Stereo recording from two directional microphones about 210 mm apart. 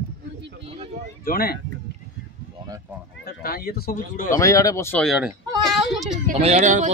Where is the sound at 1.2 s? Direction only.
45° left (ahead or behind).